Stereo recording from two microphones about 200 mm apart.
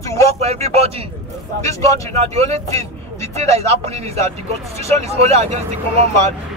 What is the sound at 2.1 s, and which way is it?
Speech, 30° right (ahead or behind).